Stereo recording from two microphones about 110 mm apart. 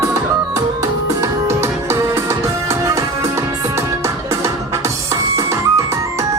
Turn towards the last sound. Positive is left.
turn(degrees=-30)  # may be behind; listen again after turning